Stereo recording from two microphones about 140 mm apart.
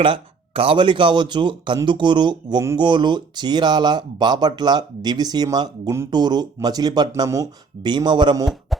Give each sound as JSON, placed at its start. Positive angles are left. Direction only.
{"t": 0.0, "sound": "speech", "side_deg": -40}
{"t": 8.7, "sound": "music", "side_deg": 0}